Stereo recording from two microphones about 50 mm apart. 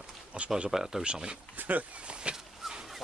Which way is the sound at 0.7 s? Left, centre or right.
Centre.